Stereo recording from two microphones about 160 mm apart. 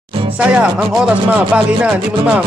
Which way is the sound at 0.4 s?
5° right (ahead or behind).